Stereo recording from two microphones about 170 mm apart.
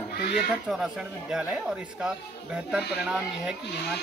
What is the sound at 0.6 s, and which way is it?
Speech, 5° right (ahead or behind).